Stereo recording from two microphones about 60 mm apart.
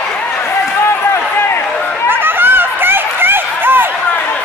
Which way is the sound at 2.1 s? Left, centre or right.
Right.